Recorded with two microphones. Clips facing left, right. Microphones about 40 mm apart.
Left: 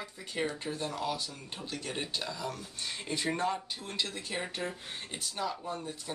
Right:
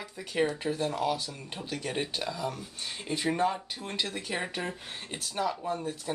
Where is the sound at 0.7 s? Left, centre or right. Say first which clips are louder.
Right 5 dB; right.